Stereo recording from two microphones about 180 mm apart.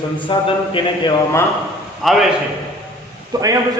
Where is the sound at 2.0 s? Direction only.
Centre (ahead or behind).